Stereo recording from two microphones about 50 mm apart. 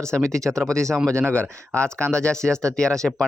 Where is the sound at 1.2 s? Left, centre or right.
Left.